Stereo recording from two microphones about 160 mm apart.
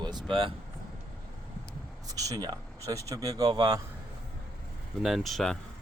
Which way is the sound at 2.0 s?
20° right (ahead or behind).